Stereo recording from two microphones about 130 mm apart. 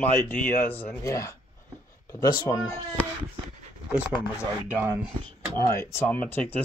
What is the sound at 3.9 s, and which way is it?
Speech, 10° right (ahead or behind).